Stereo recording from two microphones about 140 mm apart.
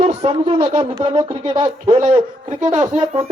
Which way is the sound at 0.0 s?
50° right (ahead or behind).